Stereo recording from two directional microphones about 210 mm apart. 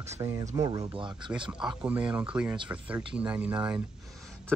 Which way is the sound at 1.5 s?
5° right (ahead or behind).